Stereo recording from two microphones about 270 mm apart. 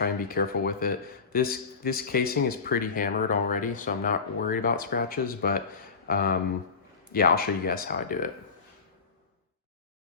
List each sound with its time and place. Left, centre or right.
0.0 s speech: left